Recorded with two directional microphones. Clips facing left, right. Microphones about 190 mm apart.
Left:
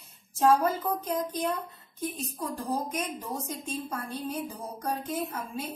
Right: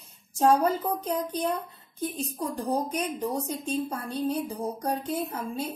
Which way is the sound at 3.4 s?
30° right (ahead or behind).